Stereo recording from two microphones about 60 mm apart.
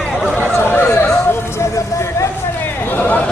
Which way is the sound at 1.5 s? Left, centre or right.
Left.